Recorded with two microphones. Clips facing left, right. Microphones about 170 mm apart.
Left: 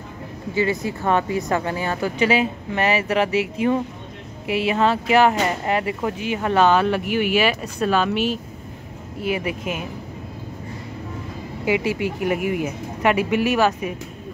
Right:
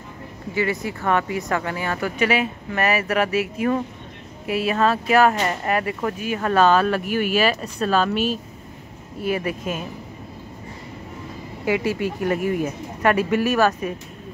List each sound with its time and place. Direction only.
0.6 s speech: 20° left (ahead or behind)
9.2 s speech: 15° left (ahead or behind)
11.6 s speech: 20° left (ahead or behind)